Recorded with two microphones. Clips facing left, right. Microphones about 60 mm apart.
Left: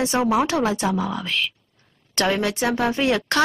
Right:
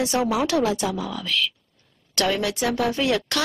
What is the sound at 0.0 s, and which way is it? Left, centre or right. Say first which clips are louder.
A woman's voice: left 2 dB; left.